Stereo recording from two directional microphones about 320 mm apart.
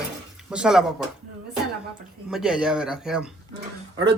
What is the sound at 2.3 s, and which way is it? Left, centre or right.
Speech, centre.